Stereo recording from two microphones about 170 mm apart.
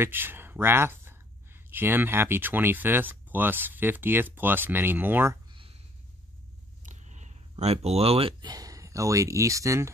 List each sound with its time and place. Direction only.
0.0 s speech: 10° right (ahead or behind)
6.8 s speech: 45° right (ahead or behind); by 9.9 s 15° right (ahead or behind)